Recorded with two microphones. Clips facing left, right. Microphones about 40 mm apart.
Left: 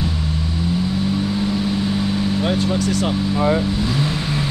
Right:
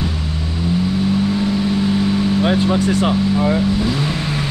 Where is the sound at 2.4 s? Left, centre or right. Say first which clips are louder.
Right 4 dB; right.